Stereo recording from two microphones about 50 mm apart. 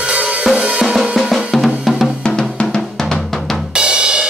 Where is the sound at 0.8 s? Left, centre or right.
Centre.